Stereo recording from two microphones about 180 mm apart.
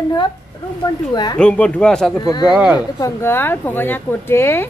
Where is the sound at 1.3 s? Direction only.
5° left (ahead or behind).